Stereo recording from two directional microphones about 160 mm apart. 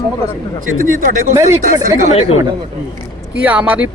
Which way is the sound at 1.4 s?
50° left (ahead or behind).